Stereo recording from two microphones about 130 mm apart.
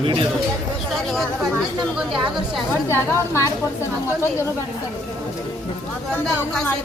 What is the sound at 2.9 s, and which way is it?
Speech, 20° left (ahead or behind).